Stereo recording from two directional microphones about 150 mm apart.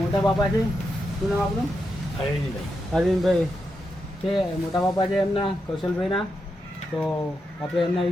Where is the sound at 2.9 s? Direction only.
Centre (ahead or behind).